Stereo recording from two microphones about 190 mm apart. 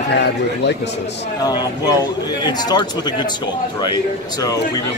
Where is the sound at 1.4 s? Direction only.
20° left (ahead or behind).